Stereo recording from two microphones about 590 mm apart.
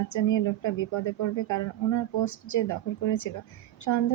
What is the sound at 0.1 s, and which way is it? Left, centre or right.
Speech, left.